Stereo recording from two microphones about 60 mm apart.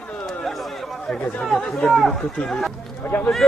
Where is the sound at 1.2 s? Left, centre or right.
Left.